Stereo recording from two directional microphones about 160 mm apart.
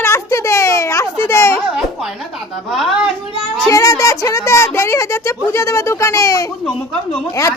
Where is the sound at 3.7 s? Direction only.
20° left (ahead or behind).